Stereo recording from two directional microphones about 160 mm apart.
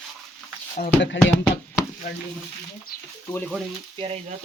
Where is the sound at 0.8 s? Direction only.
55° left (ahead or behind).